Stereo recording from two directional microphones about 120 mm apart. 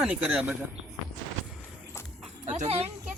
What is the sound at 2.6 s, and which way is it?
Speech, 60° right (ahead or behind).